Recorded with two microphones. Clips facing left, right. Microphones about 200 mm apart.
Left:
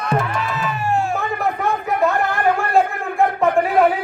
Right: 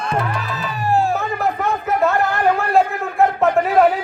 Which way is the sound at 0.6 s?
35° right (ahead or behind).